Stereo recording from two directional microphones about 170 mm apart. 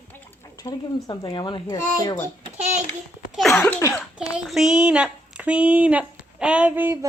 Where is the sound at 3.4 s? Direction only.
Centre (ahead or behind).